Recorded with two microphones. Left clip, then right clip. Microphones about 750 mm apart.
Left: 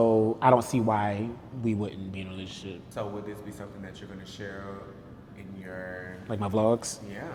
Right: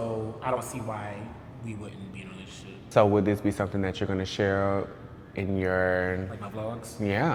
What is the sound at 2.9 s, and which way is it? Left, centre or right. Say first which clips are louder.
Speech: right 15 dB; right.